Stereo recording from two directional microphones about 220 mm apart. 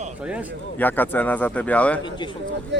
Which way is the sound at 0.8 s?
10° left (ahead or behind).